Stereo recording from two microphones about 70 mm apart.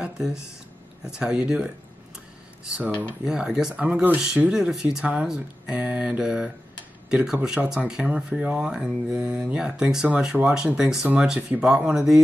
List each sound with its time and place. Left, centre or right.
0.0 s a sound: centre
1.0 s speech: centre
3.3 s speech: centre
3.8 s speech: right
4.5 s speech: centre